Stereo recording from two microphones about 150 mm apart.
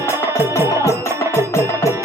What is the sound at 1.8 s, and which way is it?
Music, 20° left (ahead or behind).